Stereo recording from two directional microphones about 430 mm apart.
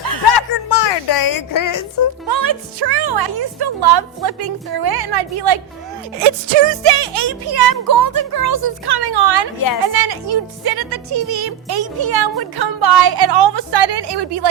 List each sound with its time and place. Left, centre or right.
0.2 s a sound: left
2.2 s speech: right
6.2 s music: right
7.0 s speech: right
9.8 s speech: right